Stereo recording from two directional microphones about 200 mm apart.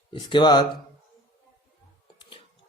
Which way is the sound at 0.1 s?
25° left (ahead or behind).